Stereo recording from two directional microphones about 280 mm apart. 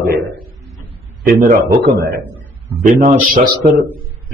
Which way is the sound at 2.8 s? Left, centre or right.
Right.